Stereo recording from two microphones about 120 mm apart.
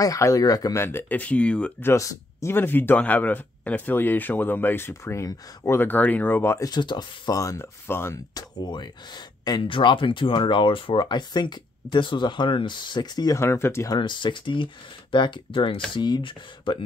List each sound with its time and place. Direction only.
0.0 s speech: 30° left (ahead or behind)
0.7 s speech: 20° left (ahead or behind)
1.9 s speech: 25° left (ahead or behind)
6.7 s speech: 40° left (ahead or behind); by 8.2 s 20° left (ahead or behind)
8.4 s speech: 35° left (ahead or behind)
13.4 s speech: 20° left (ahead or behind)
13.9 s speech: 40° left (ahead or behind)